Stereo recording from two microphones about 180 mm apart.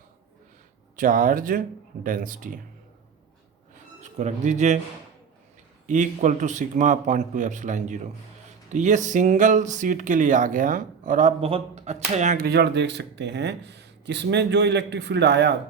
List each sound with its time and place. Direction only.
0.9 s speech: 50° right (ahead or behind)
4.2 s speech: 40° right (ahead or behind)
5.8 s speech: 45° right (ahead or behind)
12.5 s speech: 70° right (ahead or behind)